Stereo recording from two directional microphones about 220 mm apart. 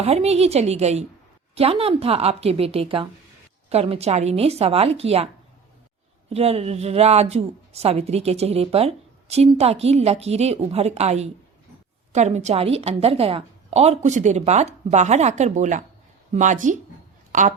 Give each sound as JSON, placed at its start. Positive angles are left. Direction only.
{"t": 0.0, "sound": "a woman's voice", "side_deg": -30}
{"t": 6.3, "sound": "a woman's voice", "side_deg": -30}